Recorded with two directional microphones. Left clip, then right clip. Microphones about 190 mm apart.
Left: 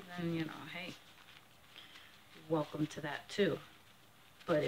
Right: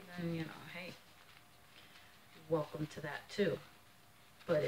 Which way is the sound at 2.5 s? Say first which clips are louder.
Left 1 dB; 45° left (ahead or behind).